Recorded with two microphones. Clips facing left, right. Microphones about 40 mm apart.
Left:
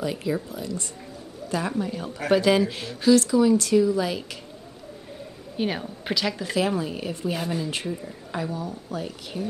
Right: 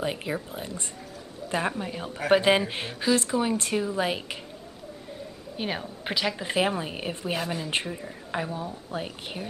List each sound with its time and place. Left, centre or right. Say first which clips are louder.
0.0 s speech: left 3 dB; right
2.0 s speech: even; centre
2.3 s speech: left 1 dB; right
3.0 s speech: left 7 dB; right
3.3 s speech: left 7 dB; right
5.6 s speech: left 4 dB; centre
6.4 s speech: left 1 dB; right
7.3 s speech: left 1 dB; centre; by 9.5 s right